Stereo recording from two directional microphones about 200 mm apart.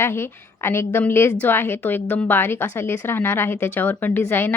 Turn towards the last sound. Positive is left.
turn(degrees=10)  # may be behind; listen again after turning